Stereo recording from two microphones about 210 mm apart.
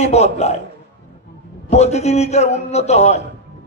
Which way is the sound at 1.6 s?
30° left (ahead or behind).